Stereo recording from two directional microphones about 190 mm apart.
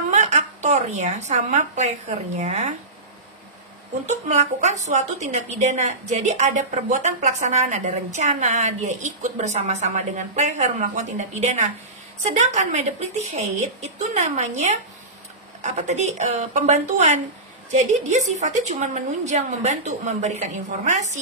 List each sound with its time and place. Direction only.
0.1 s a woman's voice: 40° right (ahead or behind)
4.1 s a woman's voice: 35° right (ahead or behind)